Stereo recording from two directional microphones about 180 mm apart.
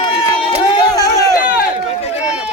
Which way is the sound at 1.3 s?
55° left (ahead or behind).